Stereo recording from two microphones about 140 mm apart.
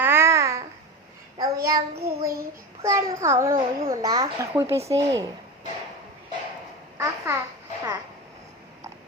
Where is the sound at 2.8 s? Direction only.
20° right (ahead or behind).